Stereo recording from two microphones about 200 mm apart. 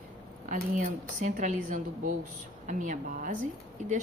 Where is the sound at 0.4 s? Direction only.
40° right (ahead or behind).